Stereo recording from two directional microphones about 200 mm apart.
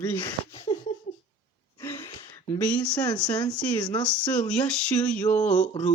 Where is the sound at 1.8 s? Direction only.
10° left (ahead or behind).